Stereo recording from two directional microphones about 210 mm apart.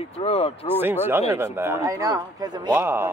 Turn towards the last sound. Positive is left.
turn(degrees=-10)  # may be behind; listen again after turning